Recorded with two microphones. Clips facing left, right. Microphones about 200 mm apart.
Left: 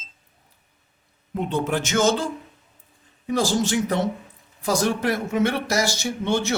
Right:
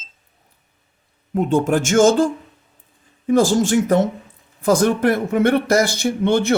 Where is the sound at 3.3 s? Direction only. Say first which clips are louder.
Right 7 dB; 50° right (ahead or behind).